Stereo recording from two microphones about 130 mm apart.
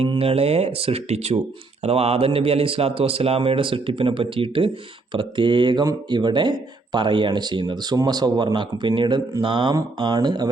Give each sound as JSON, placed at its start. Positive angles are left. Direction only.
{"t": 0.2, "sound": "speech", "side_deg": -50}